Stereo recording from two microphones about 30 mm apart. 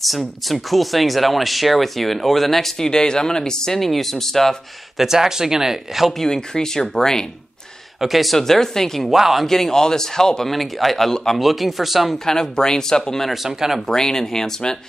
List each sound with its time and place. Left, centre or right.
0.5 s speech: centre
2.8 s speech: left
3.8 s speech: centre
4.9 s speech: centre
6.1 s speech: centre
8.0 s speech: centre
8.4 s speech: centre
9.1 s speech: centre
9.5 s speech: centre
10.5 s speech: centre
12.3 s speech: left
13.3 s speech: centre
13.8 s speech: centre